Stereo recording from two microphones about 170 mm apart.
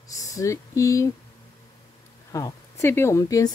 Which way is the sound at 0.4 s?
20° left (ahead or behind).